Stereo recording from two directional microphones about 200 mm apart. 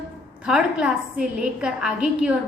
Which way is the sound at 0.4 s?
5° right (ahead or behind).